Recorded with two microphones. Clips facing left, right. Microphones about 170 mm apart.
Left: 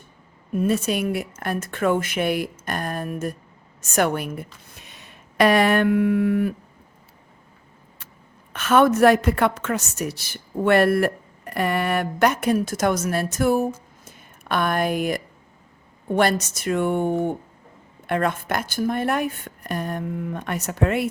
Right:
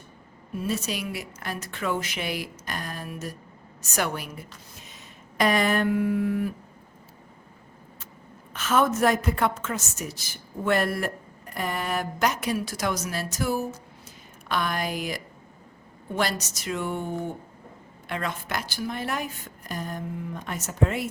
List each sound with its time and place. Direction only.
0.5 s a woman's voice: 55° left (ahead or behind)
8.5 s a woman's voice: 65° left (ahead or behind)